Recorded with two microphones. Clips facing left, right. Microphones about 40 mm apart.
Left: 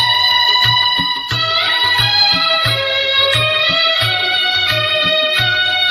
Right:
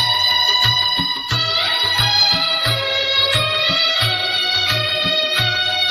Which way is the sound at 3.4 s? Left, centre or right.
Centre.